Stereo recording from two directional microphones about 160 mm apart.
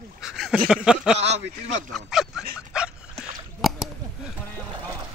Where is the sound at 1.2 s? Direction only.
45° right (ahead or behind).